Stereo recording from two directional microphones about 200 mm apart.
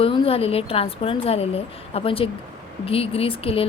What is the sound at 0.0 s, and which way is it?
Speech, 30° left (ahead or behind).